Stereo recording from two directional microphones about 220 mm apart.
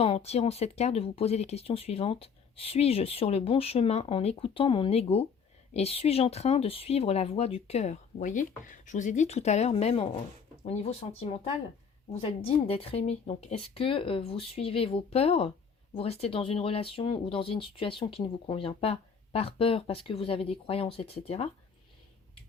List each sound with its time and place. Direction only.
0.0 s speech: 25° left (ahead or behind)